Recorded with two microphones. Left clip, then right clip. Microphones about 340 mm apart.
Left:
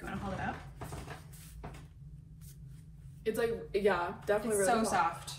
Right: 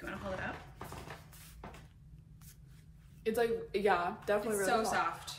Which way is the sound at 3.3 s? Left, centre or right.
Centre.